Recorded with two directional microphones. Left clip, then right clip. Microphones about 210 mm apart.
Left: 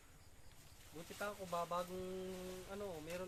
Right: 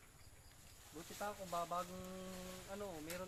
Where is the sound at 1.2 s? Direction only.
45° left (ahead or behind).